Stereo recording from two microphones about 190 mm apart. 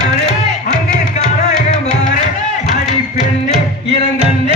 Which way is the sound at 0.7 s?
40° left (ahead or behind).